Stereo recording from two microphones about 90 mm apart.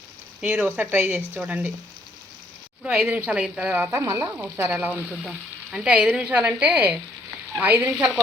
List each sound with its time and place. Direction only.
0.4 s speech: 15° right (ahead or behind)
3.0 s a woman's voice: 20° right (ahead or behind)
3.7 s speech: 25° right (ahead or behind)
3.9 s frying: 40° right (ahead or behind)
4.4 s speech: 30° right (ahead or behind)
4.7 s a woman's voice: 20° right (ahead or behind)